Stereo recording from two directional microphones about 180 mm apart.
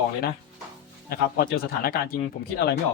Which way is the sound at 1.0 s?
55° left (ahead or behind).